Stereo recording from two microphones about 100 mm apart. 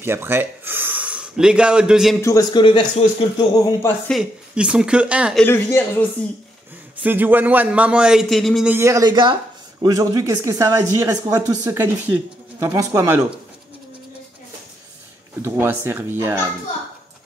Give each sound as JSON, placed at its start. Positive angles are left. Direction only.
{"t": 0.0, "sound": "speech", "side_deg": -25}
{"t": 2.5, "sound": "a man's voice", "side_deg": 50}
{"t": 4.1, "sound": "a man's voice", "side_deg": -5}
{"t": 5.4, "sound": "speech", "side_deg": 20}
{"t": 7.0, "sound": "a man's voice", "side_deg": -20}
{"t": 8.8, "sound": "speech", "side_deg": -35}
{"t": 9.1, "sound": "a sound", "side_deg": -50}
{"t": 9.8, "sound": "speech", "side_deg": -35}
{"t": 11.8, "sound": "speech", "side_deg": -25}
{"t": 15.4, "sound": "speech", "side_deg": -20}